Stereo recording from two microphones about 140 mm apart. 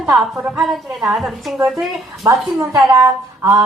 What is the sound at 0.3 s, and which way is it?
Speech, 15° right (ahead or behind).